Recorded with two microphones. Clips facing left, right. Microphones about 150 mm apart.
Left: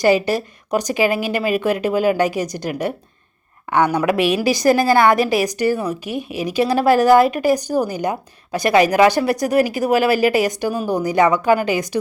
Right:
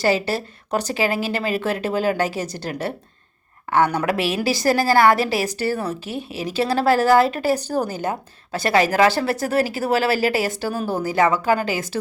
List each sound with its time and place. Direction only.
0.0 s a woman's voice: 15° left (ahead or behind)